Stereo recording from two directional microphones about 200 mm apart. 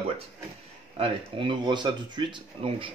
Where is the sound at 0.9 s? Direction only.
25° right (ahead or behind).